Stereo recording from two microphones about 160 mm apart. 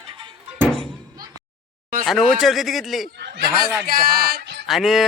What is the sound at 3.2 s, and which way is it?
Speech, 90° right.